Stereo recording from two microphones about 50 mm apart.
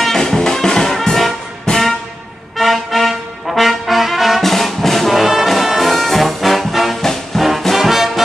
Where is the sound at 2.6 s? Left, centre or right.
Centre.